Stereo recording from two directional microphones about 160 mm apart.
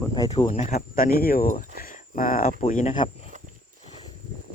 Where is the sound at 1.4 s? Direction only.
50° left (ahead or behind).